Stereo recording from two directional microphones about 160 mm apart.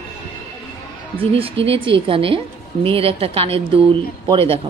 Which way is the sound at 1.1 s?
35° right (ahead or behind).